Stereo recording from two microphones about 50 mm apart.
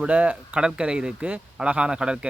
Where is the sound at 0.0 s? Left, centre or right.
Right.